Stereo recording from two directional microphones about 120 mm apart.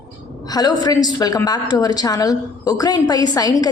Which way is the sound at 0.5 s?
35° left (ahead or behind).